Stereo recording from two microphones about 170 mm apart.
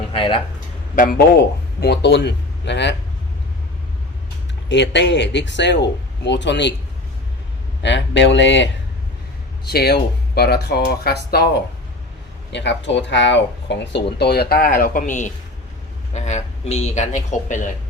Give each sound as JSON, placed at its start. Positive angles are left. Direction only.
{"t": 0.1, "sound": "speech", "side_deg": 30}
{"t": 0.9, "sound": "speech", "side_deg": 55}
{"t": 4.7, "sound": "speech", "side_deg": 90}
{"t": 7.8, "sound": "speech", "side_deg": 90}
{"t": 9.6, "sound": "speech", "side_deg": 70}
{"t": 12.5, "sound": "speech", "side_deg": 90}